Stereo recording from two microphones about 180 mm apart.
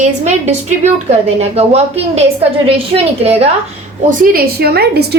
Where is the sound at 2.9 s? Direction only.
35° right (ahead or behind).